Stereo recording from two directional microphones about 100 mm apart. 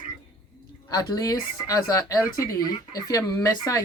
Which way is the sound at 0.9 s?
40° left (ahead or behind).